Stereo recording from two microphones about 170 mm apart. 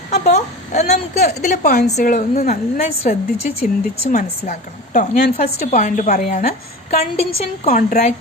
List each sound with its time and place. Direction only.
0.1 s a woman's voice: 40° left (ahead or behind)
3.6 s a woman's voice: 35° left (ahead or behind)
4.9 s a woman's voice: 60° left (ahead or behind)
7.3 s a woman's voice: 35° left (ahead or behind)
7.8 s a woman's voice: 55° left (ahead or behind)